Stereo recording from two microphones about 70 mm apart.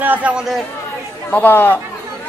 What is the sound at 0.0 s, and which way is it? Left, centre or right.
Speech, right.